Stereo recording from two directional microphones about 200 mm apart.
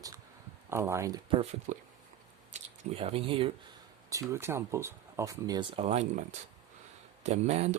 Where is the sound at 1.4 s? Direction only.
35° right (ahead or behind).